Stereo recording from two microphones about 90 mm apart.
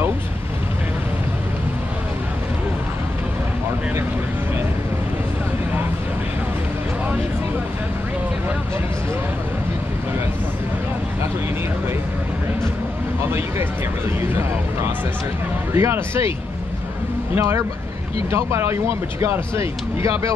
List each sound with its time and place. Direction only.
15.7 s speech: 30° right (ahead or behind)
17.4 s speech: 30° right (ahead or behind)